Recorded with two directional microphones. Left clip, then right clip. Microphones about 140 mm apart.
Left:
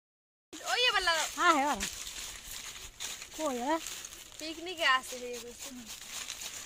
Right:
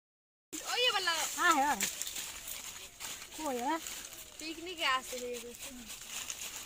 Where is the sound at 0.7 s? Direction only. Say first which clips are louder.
Left 3 dB; 60° left (ahead or behind).